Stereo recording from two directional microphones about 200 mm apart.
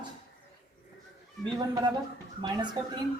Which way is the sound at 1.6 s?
20° right (ahead or behind).